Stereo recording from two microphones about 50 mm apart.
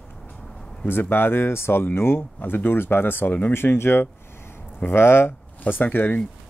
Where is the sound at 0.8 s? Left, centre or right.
Left.